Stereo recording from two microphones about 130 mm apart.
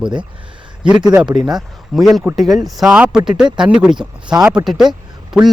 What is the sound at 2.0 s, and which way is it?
Speech, centre (ahead or behind).